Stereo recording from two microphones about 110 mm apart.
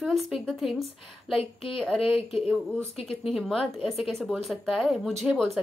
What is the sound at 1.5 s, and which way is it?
Speech, 55° left (ahead or behind).